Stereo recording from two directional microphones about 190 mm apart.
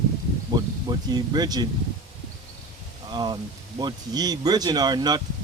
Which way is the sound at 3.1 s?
25° right (ahead or behind).